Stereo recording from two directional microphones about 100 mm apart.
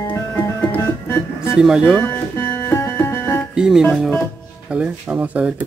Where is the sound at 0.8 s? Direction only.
25° left (ahead or behind).